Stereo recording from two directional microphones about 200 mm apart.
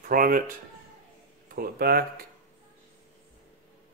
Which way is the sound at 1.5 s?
50° right (ahead or behind).